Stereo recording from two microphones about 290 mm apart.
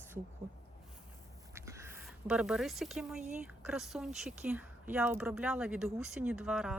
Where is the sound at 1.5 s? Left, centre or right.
Centre.